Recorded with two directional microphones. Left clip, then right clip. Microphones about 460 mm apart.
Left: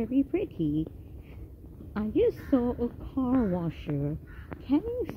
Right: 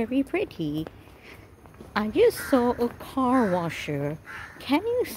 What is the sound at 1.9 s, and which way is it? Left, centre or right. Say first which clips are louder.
A woman's voice: right 5 dB; centre.